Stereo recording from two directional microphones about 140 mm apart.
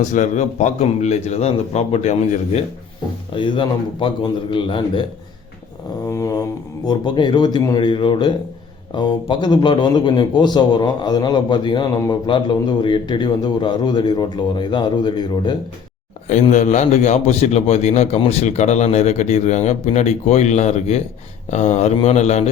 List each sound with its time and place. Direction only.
0.1 s a man's voice: 60° left (ahead or behind)
3.3 s a man's voice: 35° left (ahead or behind)
6.1 s a sound: 20° left (ahead or behind)
6.8 s a man's voice: 35° left (ahead or behind)
16.2 s a man's voice: 55° left (ahead or behind)